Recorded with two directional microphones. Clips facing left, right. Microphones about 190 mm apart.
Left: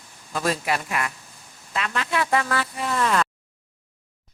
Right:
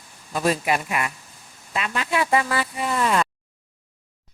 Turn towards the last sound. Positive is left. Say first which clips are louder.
# right 1 dB
turn(degrees=-10)  # may be behind; listen again after turning